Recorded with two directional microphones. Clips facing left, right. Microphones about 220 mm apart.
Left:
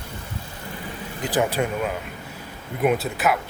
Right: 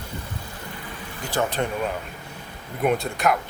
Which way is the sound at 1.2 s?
15° left (ahead or behind).